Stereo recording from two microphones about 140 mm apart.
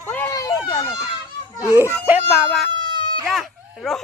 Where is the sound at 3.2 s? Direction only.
Centre (ahead or behind).